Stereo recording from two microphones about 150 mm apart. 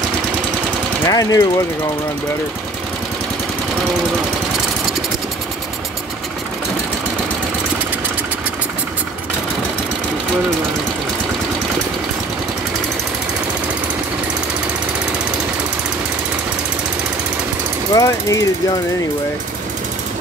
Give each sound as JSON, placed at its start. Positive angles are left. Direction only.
{"t": 1.0, "sound": "speech", "side_deg": 25}
{"t": 17.9, "sound": "speech", "side_deg": 20}